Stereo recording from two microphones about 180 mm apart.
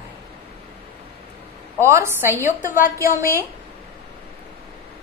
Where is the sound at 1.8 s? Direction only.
15° right (ahead or behind).